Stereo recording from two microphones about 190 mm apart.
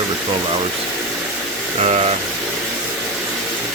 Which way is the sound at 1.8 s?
35° right (ahead or behind).